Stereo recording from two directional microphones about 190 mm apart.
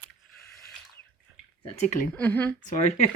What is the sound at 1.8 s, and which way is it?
Speech, 45° left (ahead or behind).